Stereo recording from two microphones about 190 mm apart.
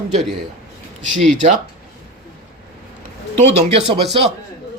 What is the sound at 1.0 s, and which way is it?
Speech, centre (ahead or behind).